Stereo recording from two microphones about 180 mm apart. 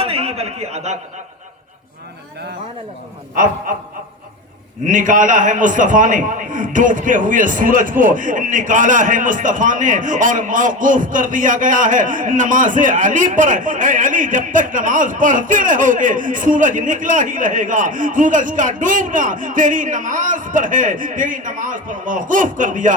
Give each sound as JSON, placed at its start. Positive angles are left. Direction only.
{"t": 0.0, "sound": "a sound", "side_deg": -35}
{"t": 3.3, "sound": "a man's voice", "side_deg": -50}
{"t": 4.9, "sound": "a man's voice", "side_deg": -45}